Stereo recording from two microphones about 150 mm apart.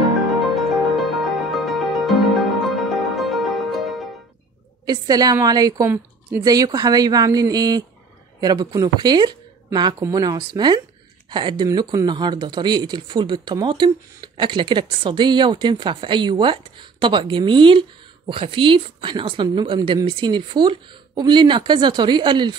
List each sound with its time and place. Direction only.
0.4 s music: centre (ahead or behind)
4.8 s a woman's voice: 25° right (ahead or behind)